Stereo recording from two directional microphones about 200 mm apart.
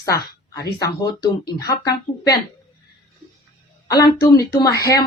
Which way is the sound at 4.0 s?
15° left (ahead or behind).